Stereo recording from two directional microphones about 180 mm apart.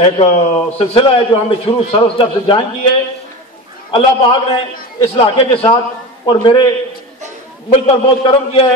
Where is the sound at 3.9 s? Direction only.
30° left (ahead or behind).